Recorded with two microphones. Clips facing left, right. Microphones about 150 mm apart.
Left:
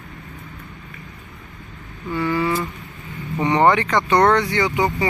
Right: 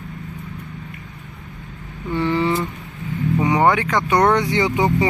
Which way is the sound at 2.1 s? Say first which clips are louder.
Right 2 dB; 25° right (ahead or behind).